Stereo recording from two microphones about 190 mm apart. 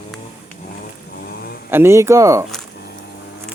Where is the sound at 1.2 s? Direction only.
55° left (ahead or behind).